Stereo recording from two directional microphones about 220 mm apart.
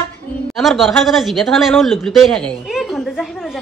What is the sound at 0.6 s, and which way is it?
Speech, centre (ahead or behind).